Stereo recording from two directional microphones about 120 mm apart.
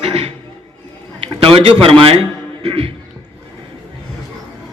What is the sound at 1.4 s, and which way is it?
A man's voice, 55° right (ahead or behind).